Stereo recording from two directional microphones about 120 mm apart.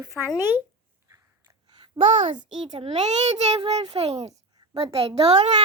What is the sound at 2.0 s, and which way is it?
Speech, 90° right.